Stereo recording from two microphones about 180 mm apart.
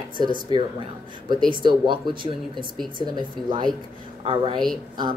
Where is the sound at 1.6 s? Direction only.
25° right (ahead or behind).